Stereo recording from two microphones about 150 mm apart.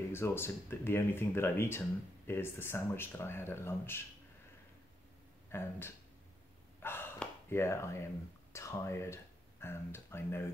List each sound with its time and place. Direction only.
0.1 s speech: 15° left (ahead or behind)
5.5 s speech: 15° left (ahead or behind)
6.8 s a sound: 15° left (ahead or behind)
8.5 s speech: 20° left (ahead or behind)